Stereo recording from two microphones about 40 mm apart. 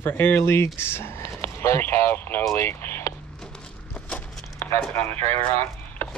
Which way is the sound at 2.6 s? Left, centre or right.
Left.